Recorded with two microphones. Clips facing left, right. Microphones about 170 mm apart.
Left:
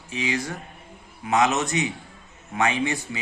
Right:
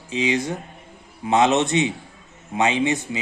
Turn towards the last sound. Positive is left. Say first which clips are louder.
# right 5 dB
turn(degrees=-20)  # may be behind; listen again after turning